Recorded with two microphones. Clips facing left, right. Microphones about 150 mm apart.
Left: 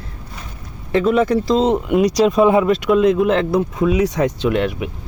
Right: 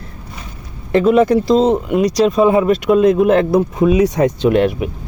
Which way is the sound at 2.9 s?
45° right (ahead or behind).